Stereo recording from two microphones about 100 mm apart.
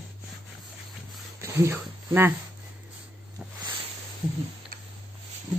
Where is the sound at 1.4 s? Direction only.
25° right (ahead or behind).